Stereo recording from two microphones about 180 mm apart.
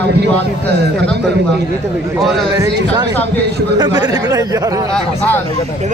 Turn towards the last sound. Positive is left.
turn(degrees=10)  # may be behind; listen again after turning